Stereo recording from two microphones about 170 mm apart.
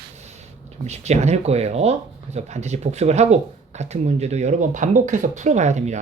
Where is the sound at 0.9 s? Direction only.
40° right (ahead or behind).